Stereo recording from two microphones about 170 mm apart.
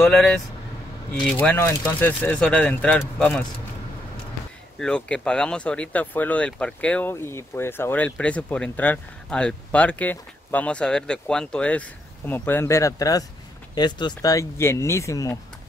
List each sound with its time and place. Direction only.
0.0 s speech: centre (ahead or behind)
1.4 s speech: 10° left (ahead or behind)
4.7 s speech: 5° left (ahead or behind)